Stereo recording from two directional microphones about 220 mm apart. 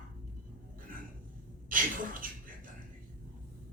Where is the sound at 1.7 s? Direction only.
40° right (ahead or behind).